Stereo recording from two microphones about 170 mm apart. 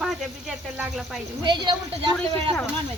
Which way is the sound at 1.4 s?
25° right (ahead or behind).